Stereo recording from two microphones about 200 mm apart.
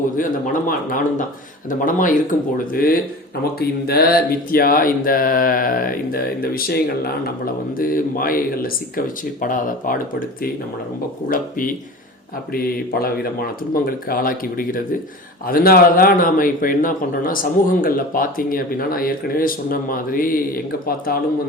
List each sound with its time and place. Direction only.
1.8 s speech: 40° left (ahead or behind)